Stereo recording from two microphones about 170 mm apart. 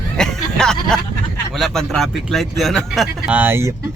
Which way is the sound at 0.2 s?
5° left (ahead or behind).